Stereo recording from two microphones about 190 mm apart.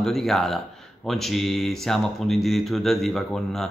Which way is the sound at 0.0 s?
Centre (ahead or behind).